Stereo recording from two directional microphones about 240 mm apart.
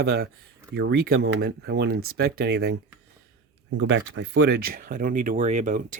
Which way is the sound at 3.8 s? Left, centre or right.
Right.